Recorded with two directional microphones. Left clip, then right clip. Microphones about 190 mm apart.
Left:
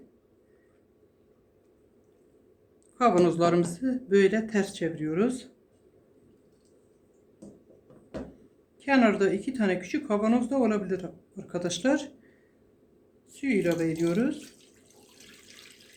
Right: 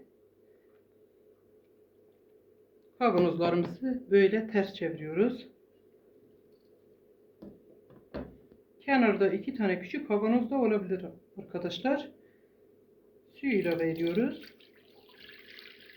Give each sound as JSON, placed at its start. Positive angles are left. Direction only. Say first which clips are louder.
{"t": 3.0, "sound": "speech", "louder": "left 4 dB", "side_deg": 55}
{"t": 8.8, "sound": "speech", "louder": "left 2 dB", "side_deg": 55}
{"t": 13.3, "sound": "speech", "louder": "left 3 dB", "side_deg": 55}